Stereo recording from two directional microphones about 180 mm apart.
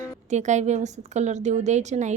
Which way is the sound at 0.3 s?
40° right (ahead or behind).